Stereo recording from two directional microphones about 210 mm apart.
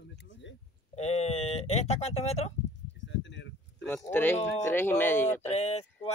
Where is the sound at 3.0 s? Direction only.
60° left (ahead or behind).